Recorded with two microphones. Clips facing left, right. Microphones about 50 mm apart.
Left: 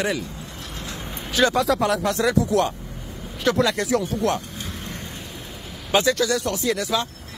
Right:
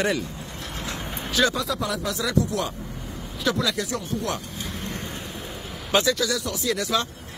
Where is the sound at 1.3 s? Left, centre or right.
Left.